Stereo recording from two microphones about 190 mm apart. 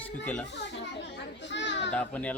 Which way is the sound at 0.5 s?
65° left (ahead or behind).